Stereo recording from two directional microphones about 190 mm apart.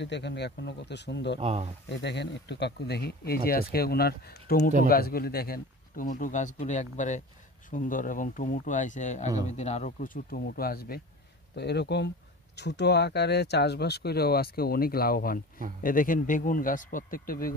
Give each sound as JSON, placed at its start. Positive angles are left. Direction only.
{"t": 0.0, "sound": "speech", "side_deg": 65}
{"t": 1.4, "sound": "speech", "side_deg": -30}
{"t": 1.9, "sound": "speech", "side_deg": 65}